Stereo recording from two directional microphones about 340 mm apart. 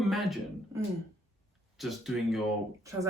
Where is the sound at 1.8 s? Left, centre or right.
Centre.